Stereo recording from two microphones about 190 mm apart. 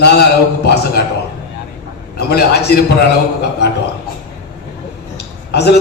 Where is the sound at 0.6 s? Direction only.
60° left (ahead or behind).